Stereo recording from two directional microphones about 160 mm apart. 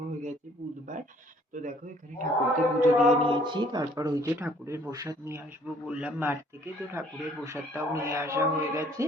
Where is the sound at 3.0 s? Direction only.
35° right (ahead or behind).